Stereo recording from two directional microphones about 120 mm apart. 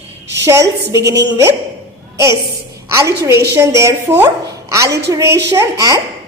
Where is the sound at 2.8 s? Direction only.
25° right (ahead or behind).